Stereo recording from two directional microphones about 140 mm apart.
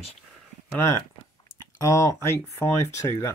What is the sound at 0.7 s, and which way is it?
Speech, 20° left (ahead or behind).